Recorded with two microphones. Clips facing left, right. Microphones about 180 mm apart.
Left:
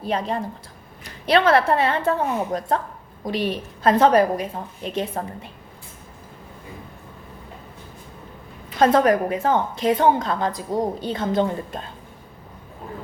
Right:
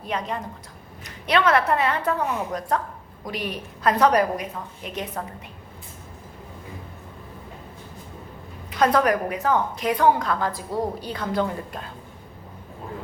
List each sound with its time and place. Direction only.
0.0 s a woman's voice: 30° left (ahead or behind)
8.8 s a woman's voice: 25° left (ahead or behind)